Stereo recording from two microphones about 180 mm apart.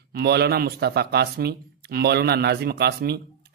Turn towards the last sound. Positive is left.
turn(degrees=-65)  # may be behind; listen again after turning